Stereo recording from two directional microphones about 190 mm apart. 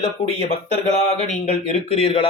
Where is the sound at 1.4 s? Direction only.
35° left (ahead or behind).